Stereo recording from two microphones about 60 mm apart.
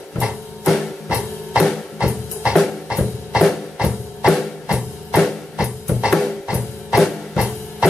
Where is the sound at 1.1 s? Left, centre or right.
Centre.